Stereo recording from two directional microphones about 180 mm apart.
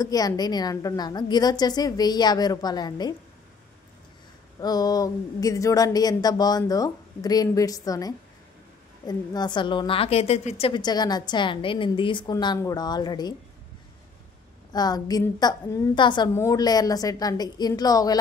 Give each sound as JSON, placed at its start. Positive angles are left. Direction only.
{"t": 0.0, "sound": "a woman's voice", "side_deg": 20}
{"t": 4.6, "sound": "a woman's voice", "side_deg": 20}
{"t": 14.7, "sound": "a woman's voice", "side_deg": 20}